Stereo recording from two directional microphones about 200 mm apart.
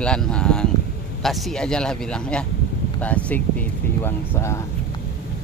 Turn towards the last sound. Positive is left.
turn(degrees=15)  # may be behind; listen again after turning